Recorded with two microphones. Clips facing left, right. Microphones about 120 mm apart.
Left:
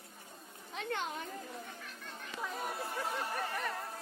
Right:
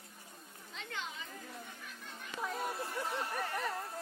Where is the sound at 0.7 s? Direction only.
55° left (ahead or behind).